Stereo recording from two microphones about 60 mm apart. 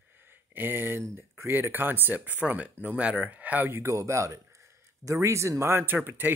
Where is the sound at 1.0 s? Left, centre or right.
Right.